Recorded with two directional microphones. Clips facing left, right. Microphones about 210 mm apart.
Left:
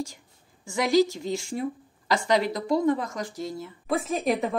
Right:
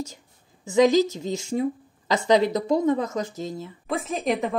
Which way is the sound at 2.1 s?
20° right (ahead or behind).